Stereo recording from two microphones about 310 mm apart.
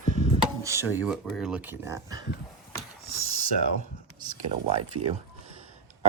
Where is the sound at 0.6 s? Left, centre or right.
Centre.